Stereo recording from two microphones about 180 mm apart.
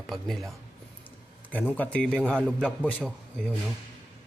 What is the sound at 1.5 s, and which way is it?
A man's voice, 10° left (ahead or behind).